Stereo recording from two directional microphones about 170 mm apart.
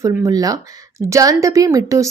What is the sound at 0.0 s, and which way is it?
A woman's voice, 20° right (ahead or behind).